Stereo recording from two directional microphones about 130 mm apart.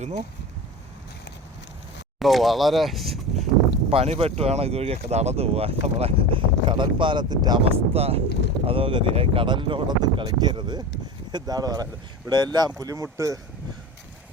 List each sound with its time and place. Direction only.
2.1 s speech: centre (ahead or behind)
3.8 s speech: 45° right (ahead or behind)
7.6 s speech: 50° right (ahead or behind); by 13.4 s 25° right (ahead or behind)